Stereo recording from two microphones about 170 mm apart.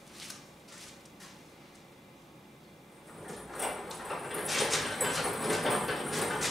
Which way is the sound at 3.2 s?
Centre (ahead or behind).